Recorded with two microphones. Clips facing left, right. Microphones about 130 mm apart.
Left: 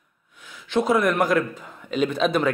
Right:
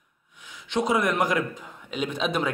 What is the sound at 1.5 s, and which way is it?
Speech, 10° right (ahead or behind).